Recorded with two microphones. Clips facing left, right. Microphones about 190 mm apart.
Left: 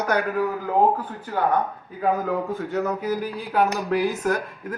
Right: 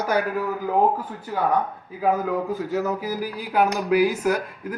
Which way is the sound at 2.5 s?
5° right (ahead or behind).